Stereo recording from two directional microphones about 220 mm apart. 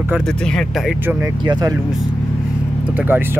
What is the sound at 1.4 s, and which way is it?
Speech, 20° right (ahead or behind).